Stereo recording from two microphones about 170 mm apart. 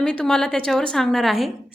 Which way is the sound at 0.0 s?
5° left (ahead or behind).